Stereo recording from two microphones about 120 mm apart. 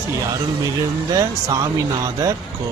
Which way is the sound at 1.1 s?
30° right (ahead or behind).